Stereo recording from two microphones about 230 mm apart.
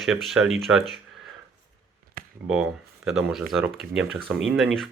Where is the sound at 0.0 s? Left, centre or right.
Centre.